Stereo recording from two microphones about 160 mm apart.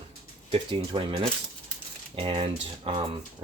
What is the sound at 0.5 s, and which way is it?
Speech, 30° right (ahead or behind).